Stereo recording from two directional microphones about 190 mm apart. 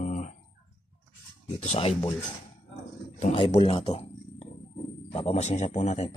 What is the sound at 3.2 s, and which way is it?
A man's voice, 35° left (ahead or behind).